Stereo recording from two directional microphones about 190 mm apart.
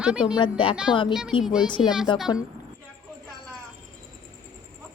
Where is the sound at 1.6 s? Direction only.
25° left (ahead or behind).